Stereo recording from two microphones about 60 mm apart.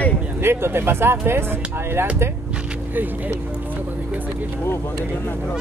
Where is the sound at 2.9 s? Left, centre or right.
Right.